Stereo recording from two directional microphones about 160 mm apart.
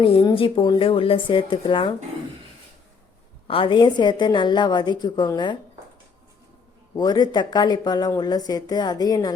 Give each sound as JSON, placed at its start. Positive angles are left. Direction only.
{"t": 0.0, "sound": "a woman's voice", "side_deg": 30}
{"t": 3.4, "sound": "speech", "side_deg": 35}
{"t": 6.9, "sound": "speech", "side_deg": 25}